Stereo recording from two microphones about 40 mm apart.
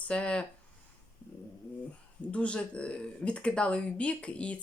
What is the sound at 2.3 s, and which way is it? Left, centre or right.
Speech, left.